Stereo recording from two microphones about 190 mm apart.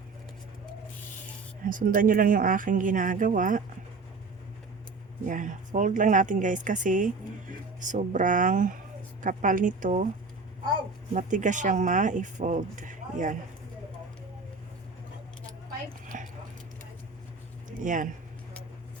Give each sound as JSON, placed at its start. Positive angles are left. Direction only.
{"t": 1.6, "sound": "a woman's voice", "side_deg": -45}
{"t": 5.2, "sound": "a woman's voice", "side_deg": -45}
{"t": 11.1, "sound": "speech", "side_deg": -40}
{"t": 16.0, "sound": "a sound", "side_deg": -45}
{"t": 17.8, "sound": "a woman's voice", "side_deg": -45}